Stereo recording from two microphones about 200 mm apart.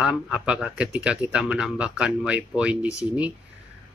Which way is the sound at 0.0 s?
5° right (ahead or behind).